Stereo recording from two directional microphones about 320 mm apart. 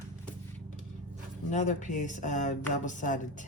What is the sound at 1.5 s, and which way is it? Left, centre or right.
Speech, left.